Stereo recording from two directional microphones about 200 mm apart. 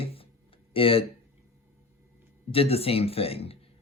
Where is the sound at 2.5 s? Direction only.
30° left (ahead or behind).